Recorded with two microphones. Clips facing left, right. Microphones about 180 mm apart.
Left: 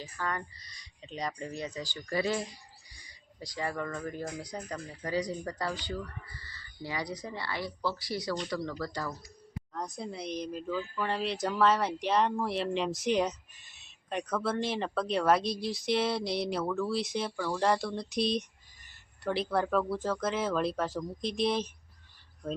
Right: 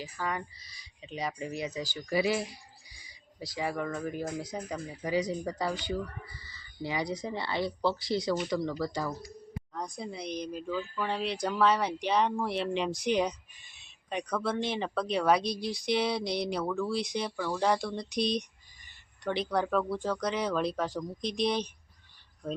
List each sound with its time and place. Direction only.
0.0 s speech: 10° right (ahead or behind)
9.7 s speech: centre (ahead or behind)